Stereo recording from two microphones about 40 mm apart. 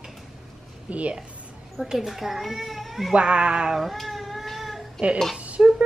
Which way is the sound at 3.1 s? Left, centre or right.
Right.